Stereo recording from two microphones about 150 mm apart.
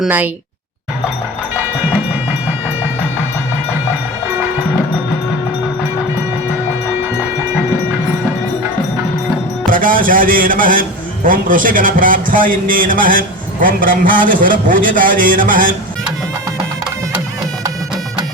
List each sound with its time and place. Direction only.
9.6 s a man's voice: 65° right (ahead or behind)